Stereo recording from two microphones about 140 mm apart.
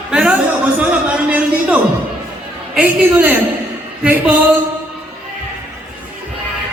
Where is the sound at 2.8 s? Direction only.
10° right (ahead or behind).